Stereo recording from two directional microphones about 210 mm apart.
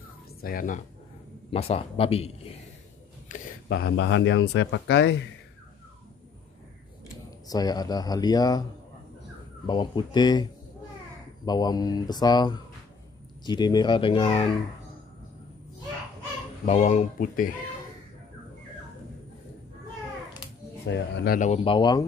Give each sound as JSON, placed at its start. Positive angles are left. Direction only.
{"t": 0.4, "sound": "speech", "side_deg": 40}
{"t": 1.5, "sound": "speech", "side_deg": 30}
{"t": 3.3, "sound": "a sound", "side_deg": 35}
{"t": 3.6, "sound": "speech", "side_deg": 55}
{"t": 7.4, "sound": "speech", "side_deg": 20}
{"t": 9.7, "sound": "speech", "side_deg": 20}
{"t": 16.6, "sound": "speech", "side_deg": 35}
{"t": 20.8, "sound": "speech", "side_deg": 50}
{"t": 21.5, "sound": "speech", "side_deg": 25}